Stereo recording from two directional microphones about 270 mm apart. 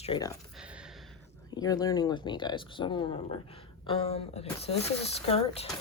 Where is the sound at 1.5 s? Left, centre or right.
Centre.